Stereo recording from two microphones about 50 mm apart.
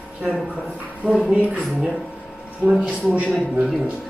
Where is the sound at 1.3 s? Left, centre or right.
Right.